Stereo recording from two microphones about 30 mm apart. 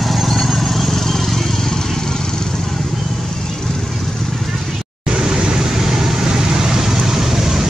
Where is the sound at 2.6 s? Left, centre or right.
Centre.